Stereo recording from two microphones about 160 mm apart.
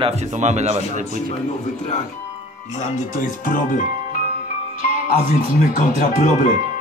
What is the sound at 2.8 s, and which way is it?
Speech, 50° left (ahead or behind).